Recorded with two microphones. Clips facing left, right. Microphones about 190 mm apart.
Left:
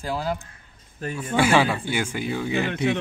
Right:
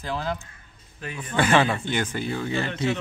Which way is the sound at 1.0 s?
45° left (ahead or behind).